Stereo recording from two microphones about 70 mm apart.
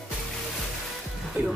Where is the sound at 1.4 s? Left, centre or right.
Right.